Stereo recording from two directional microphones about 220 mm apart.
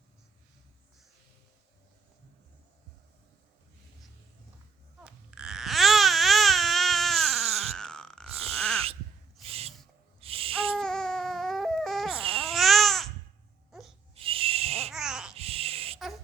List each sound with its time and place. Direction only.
5.0 s baby cry: 5° right (ahead or behind)
8.5 s wail: 5° left (ahead or behind)
9.4 s owl: 25° right (ahead or behind)
10.8 s baby cry: 5° left (ahead or behind)
12.1 s baby cry: 25° right (ahead or behind)
12.5 s babbling: centre (ahead or behind)
14.2 s owl: 25° right (ahead or behind)
14.9 s babbling: 5° right (ahead or behind)
15.4 s a sound: 25° right (ahead or behind)